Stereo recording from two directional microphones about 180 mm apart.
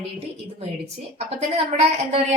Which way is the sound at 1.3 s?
35° right (ahead or behind).